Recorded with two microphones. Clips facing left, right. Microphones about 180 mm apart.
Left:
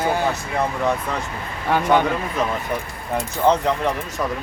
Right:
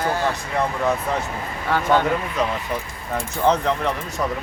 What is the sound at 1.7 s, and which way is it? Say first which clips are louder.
Speech: left 2 dB; 15° left (ahead or behind).